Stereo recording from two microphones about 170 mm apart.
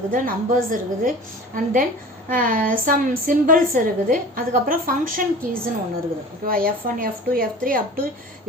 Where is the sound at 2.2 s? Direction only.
55° right (ahead or behind).